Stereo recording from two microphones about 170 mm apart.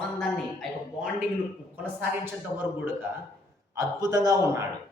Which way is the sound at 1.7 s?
10° right (ahead or behind).